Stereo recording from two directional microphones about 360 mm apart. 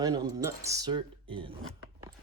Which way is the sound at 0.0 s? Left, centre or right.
Centre.